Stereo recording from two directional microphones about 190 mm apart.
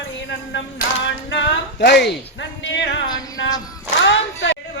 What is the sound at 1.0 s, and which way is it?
Speech, 70° left (ahead or behind).